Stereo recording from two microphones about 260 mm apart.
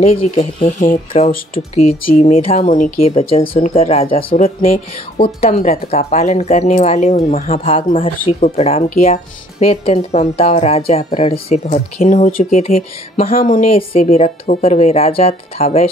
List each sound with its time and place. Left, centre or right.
0.4 s speech: left
13.7 s speech: left